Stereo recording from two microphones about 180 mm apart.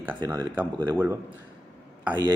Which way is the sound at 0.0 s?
15° right (ahead or behind).